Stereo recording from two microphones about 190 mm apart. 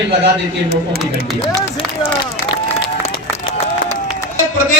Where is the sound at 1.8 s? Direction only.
30° left (ahead or behind).